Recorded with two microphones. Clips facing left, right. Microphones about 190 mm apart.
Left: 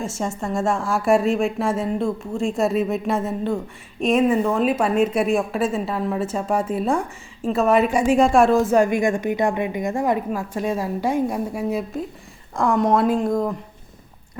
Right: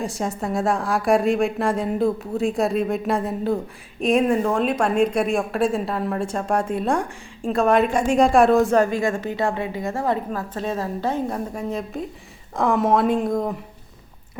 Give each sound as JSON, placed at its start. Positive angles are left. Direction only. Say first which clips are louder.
{"t": 0.0, "sound": "a woman's voice", "louder": "even", "side_deg": 0}
{"t": 8.7, "sound": "a woman's voice", "louder": "left 2 dB", "side_deg": 15}